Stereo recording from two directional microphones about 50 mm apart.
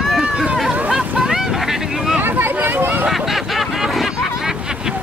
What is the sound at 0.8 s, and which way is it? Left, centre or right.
Boat, centre.